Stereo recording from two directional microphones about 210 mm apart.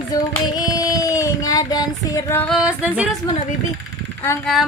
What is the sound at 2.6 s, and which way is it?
Music, 5° right (ahead or behind).